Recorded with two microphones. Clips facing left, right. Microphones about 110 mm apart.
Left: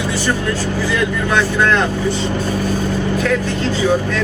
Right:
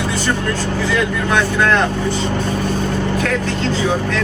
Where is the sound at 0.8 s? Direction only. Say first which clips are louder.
Right 1 dB; centre (ahead or behind).